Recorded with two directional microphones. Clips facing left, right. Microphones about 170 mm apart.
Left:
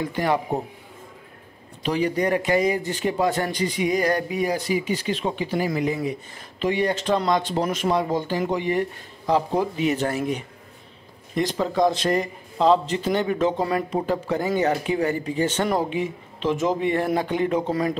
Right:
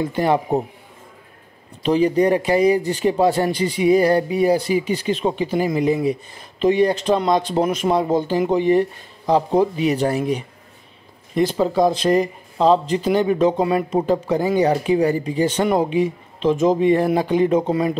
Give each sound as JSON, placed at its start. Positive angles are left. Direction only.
{"t": 0.2, "sound": "speech", "side_deg": -25}
{"t": 1.9, "sound": "speech", "side_deg": -25}
{"t": 3.5, "sound": "speech", "side_deg": 15}
{"t": 3.8, "sound": "speech", "side_deg": -35}
{"t": 5.1, "sound": "a man's voice", "side_deg": -20}